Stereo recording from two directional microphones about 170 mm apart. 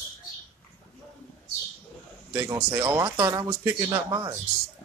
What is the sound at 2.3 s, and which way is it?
Speech, 15° right (ahead or behind).